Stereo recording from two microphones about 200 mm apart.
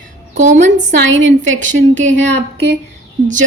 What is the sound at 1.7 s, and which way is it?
Speech, 65° right (ahead or behind).